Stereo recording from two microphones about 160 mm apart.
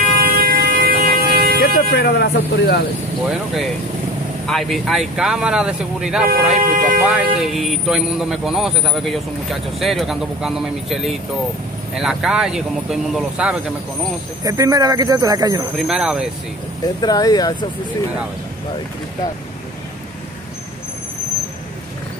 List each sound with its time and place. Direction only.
0.2 s air horn: 70° right (ahead or behind)
1.6 s speech: 90° left
3.3 s speech: centre (ahead or behind)
6.5 s speech: 60° right (ahead or behind)
7.1 s speech: centre (ahead or behind)
14.4 s speech: 20° right (ahead or behind)
15.9 s speech: 5° right (ahead or behind)
17.0 s speech: 25° left (ahead or behind)